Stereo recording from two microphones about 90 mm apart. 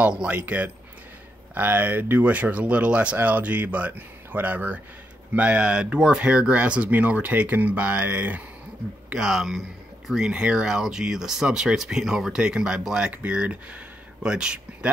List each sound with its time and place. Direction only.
0.0 s speech: 10° right (ahead or behind)
9.1 s speech: 5° right (ahead or behind)